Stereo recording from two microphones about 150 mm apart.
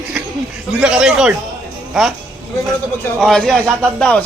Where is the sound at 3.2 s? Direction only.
5° left (ahead or behind).